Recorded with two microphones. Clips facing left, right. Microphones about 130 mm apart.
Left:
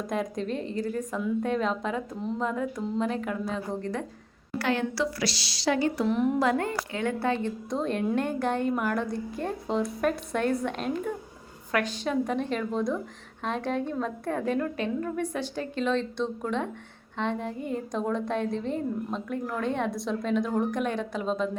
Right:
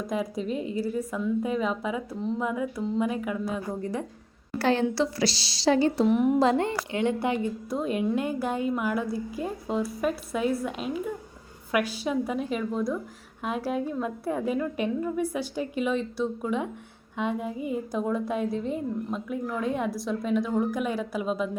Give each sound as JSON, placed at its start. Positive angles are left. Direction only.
{"t": 0.1, "sound": "a woman's voice", "side_deg": -5}
{"t": 4.5, "sound": "a woman's voice", "side_deg": -30}
{"t": 6.1, "sound": "a woman's voice", "side_deg": -10}
{"t": 6.4, "sound": "a woman's voice", "side_deg": -25}